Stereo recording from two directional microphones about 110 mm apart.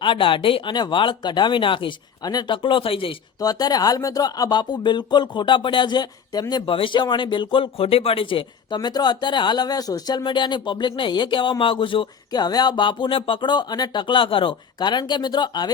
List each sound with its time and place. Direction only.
0.0 s speech: 50° left (ahead or behind)
2.6 s speech: 50° left (ahead or behind)
3.4 s speech: 35° left (ahead or behind)
6.5 s speech: 50° left (ahead or behind)